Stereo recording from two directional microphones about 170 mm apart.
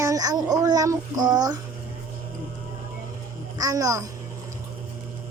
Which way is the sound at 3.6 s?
20° right (ahead or behind).